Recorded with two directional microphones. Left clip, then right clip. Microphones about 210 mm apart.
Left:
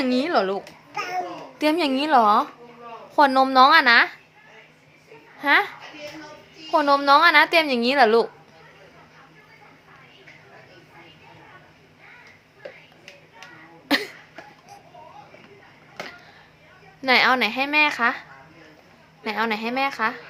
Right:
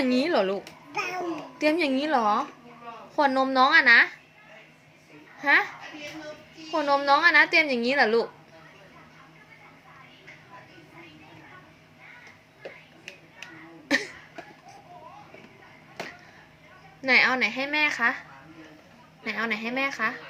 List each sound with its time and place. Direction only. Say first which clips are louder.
0.0 s a woman's voice: left 2 dB; 5° left (ahead or behind)
5.4 s a woman's voice: left 3 dB; 15° left (ahead or behind)
13.8 s cough: left 3 dB; 15° left (ahead or behind)
17.0 s a woman's voice: left 3 dB; 20° left (ahead or behind)
19.2 s a woman's voice: left 4 dB; 15° left (ahead or behind)